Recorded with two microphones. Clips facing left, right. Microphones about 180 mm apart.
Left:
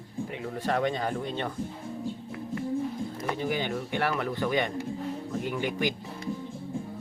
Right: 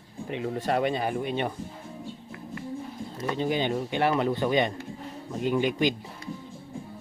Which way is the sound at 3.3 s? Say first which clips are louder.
Right 4 dB; 20° right (ahead or behind).